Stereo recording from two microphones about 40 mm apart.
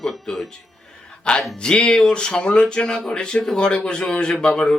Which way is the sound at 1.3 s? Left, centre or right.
Left.